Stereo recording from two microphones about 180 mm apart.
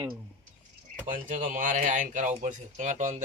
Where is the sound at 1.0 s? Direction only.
45° right (ahead or behind).